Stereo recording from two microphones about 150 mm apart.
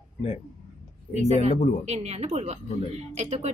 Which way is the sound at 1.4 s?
50° right (ahead or behind).